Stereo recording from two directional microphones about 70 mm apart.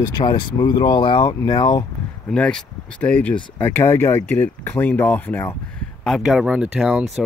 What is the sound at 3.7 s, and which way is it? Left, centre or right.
Speech, left.